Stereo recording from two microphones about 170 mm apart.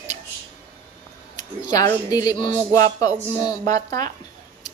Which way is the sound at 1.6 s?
20° left (ahead or behind).